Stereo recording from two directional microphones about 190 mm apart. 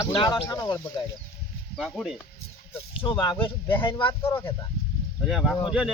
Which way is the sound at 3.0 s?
25° left (ahead or behind).